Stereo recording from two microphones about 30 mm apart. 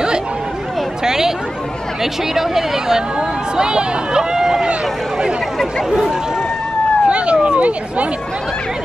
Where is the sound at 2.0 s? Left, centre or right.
Centre.